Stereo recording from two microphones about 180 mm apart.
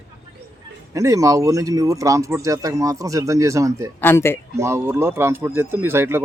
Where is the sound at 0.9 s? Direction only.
20° right (ahead or behind).